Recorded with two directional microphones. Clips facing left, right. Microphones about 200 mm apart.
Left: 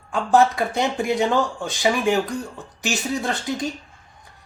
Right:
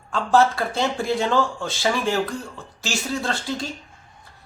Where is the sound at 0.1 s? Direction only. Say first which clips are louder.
Left 1 dB; 15° left (ahead or behind).